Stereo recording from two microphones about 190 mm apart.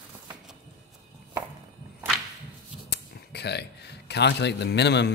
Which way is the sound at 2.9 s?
60° left (ahead or behind).